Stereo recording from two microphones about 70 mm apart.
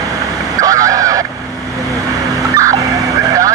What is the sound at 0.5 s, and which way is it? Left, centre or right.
Honk, right.